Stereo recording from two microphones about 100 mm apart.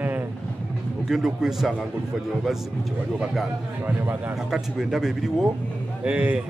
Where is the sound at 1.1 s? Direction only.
5° right (ahead or behind).